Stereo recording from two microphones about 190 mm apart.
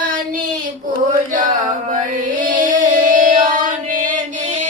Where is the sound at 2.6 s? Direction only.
45° right (ahead or behind).